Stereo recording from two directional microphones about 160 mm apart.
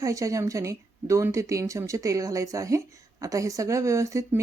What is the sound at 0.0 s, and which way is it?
Speech, 20° right (ahead or behind).